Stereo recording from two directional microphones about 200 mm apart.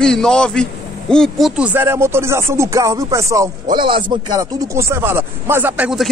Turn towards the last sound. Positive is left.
turn(degrees=-5)  # may be behind; listen again after turning